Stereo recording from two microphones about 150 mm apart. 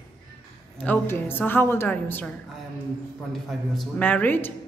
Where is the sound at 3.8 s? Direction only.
10° left (ahead or behind).